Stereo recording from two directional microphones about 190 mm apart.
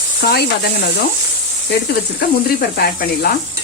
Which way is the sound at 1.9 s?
55° left (ahead or behind).